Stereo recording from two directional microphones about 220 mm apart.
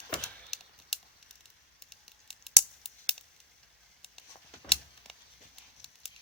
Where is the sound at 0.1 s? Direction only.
Centre (ahead or behind).